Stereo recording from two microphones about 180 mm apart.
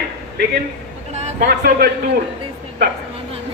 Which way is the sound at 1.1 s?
40° right (ahead or behind).